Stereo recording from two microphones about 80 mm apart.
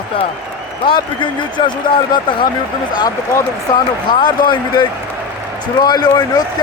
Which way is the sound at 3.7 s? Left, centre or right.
Left.